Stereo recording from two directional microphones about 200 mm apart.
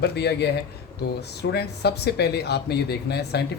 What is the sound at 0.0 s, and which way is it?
Speech, 55° left (ahead or behind).